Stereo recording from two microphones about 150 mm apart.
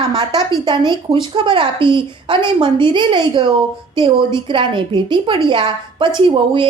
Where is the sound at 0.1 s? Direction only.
25° right (ahead or behind).